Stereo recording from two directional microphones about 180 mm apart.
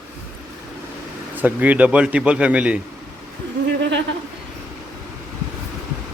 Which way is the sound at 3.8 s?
80° right.